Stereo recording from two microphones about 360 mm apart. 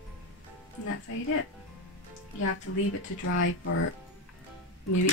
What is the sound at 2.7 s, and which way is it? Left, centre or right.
Speech, left.